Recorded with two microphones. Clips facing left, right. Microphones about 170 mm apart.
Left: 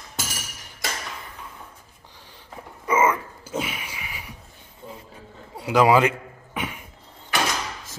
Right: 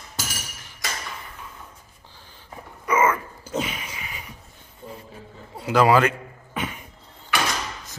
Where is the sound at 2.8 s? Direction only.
20° left (ahead or behind).